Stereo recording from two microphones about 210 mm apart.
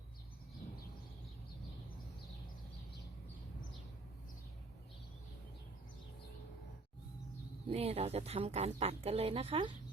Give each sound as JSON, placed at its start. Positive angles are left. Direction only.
{"t": 7.7, "sound": "speech", "side_deg": -30}